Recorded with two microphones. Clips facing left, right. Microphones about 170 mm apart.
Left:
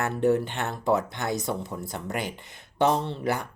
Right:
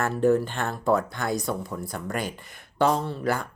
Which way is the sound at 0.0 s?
20° left (ahead or behind).